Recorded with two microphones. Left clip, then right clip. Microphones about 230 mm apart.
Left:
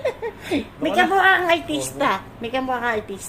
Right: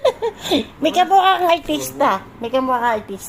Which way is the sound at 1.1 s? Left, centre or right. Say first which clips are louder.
Right 3 dB; right.